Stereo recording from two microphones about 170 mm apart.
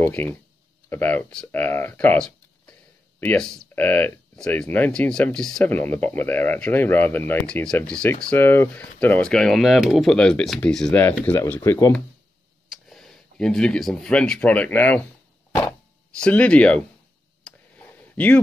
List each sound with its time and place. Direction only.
0.0 s speech: 10° left (ahead or behind)
10.9 s speech: 15° left (ahead or behind)
12.9 s speech: centre (ahead or behind)
16.2 s speech: 5° left (ahead or behind)
17.4 s clicking: 5° left (ahead or behind)